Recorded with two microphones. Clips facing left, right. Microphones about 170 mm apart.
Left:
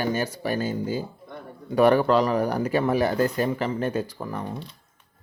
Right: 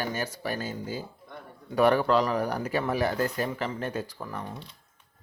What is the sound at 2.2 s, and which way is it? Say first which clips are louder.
Speech: left 5 dB; 40° left (ahead or behind).